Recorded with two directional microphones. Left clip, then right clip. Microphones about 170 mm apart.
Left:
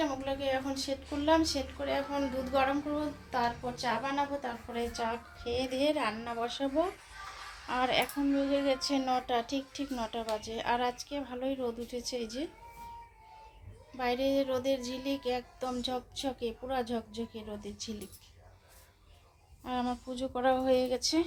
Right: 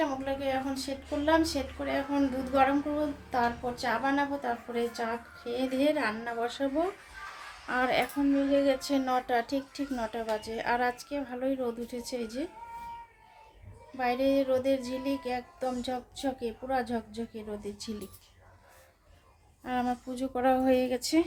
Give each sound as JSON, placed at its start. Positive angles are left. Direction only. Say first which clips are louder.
{"t": 0.0, "sound": "speech", "louder": "right 2 dB", "side_deg": -25}
{"t": 13.9, "sound": "music", "louder": "right 3 dB", "side_deg": -15}
{"t": 19.6, "sound": "speech", "louder": "right 3 dB", "side_deg": -25}